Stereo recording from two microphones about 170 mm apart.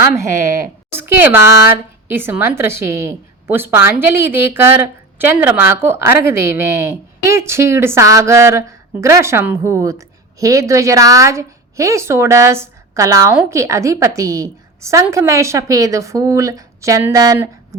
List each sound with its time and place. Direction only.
0.0 s a woman's voice: 15° right (ahead or behind)